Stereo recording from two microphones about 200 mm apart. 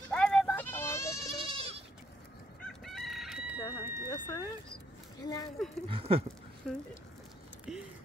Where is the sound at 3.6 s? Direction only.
15° left (ahead or behind).